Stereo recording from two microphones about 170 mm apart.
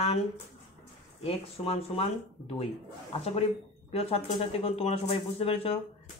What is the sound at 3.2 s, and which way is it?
Speech, 35° left (ahead or behind).